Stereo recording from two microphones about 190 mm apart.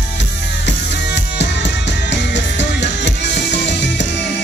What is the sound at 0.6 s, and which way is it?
Music, 65° left (ahead or behind).